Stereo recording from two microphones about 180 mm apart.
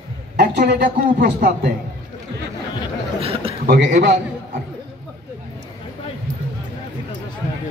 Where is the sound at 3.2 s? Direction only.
30° right (ahead or behind).